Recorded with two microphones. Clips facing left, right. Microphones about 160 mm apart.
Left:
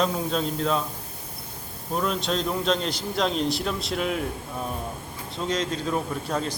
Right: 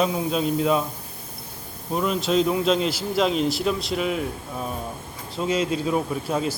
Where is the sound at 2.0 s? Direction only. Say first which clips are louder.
Right 5 dB; 5° right (ahead or behind).